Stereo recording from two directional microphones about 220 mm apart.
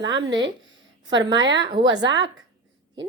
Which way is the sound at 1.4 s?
55° right (ahead or behind).